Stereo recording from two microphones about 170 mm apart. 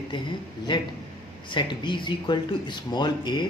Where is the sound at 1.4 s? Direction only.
25° left (ahead or behind).